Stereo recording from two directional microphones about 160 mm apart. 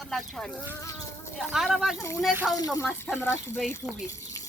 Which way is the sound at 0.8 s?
20° left (ahead or behind).